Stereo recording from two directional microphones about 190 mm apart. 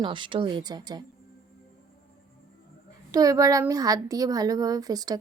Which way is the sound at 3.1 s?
20° right (ahead or behind).